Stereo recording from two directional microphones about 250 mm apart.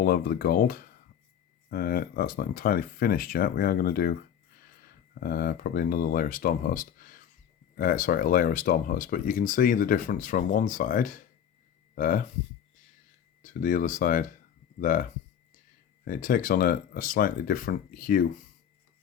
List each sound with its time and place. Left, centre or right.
0.0 s speech: left
13.4 s speech: left
16.0 s speech: left